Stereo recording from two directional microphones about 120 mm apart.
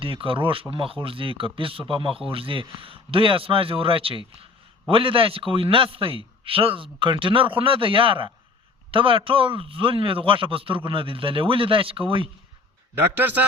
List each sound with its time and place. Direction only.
0.0 s speech: 50° right (ahead or behind)
13.0 s a man's voice: 15° right (ahead or behind)